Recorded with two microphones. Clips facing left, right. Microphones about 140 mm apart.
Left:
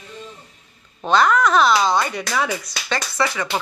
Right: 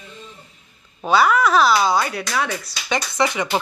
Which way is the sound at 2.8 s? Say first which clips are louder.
Right 2 dB; 20° right (ahead or behind).